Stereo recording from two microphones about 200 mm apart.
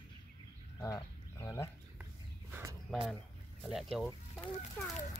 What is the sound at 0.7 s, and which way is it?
Fowl, 15° left (ahead or behind).